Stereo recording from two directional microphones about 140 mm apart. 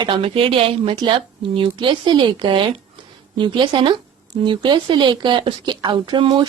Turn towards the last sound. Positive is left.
turn(degrees=-35)  # may be behind; listen again after turning